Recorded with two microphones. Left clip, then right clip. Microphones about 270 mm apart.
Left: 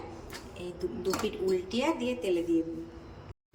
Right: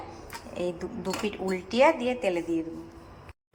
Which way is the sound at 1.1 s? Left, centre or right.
Right.